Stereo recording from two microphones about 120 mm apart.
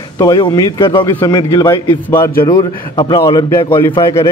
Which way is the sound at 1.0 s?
20° left (ahead or behind).